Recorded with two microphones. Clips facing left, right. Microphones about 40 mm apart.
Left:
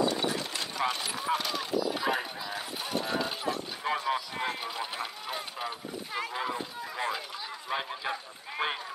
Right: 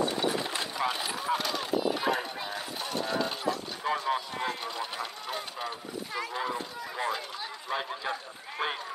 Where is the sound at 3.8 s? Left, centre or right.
Left.